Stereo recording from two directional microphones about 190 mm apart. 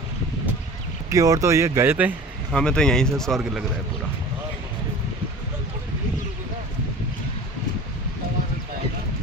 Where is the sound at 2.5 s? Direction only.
5° left (ahead or behind).